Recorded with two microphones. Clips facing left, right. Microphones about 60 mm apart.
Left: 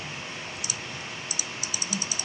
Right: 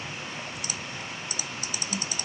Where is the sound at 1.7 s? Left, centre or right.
Right.